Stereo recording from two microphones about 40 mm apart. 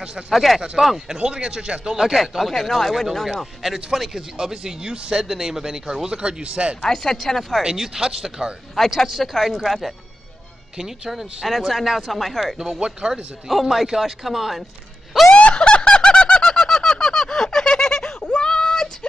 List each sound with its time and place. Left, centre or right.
0.3 s speech: centre
0.7 s speech: centre
1.1 s speech: centre
2.0 s speech: centre
3.6 s speech: centre
4.9 s speech: right
5.2 s speech: centre; by 6.8 s right
6.8 s speech: centre
7.7 s speech: centre
8.7 s speech: centre
12.5 s speech: centre
13.5 s speech: centre
15.3 s snicker: left
18.2 s a sound: left